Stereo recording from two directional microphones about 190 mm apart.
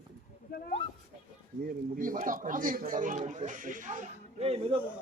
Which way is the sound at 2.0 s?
45° right (ahead or behind).